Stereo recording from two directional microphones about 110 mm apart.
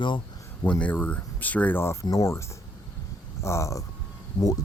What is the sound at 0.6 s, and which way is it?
Speech, 15° left (ahead or behind).